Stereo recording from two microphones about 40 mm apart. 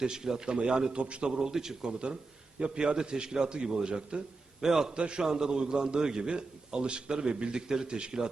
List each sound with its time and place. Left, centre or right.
0.0 s a man's voice: centre
1.4 s a man's voice: centre
1.9 s a man's voice: right
4.9 s a man's voice: right